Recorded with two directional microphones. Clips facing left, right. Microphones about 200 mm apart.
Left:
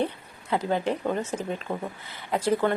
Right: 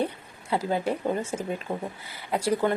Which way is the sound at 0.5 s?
5° right (ahead or behind).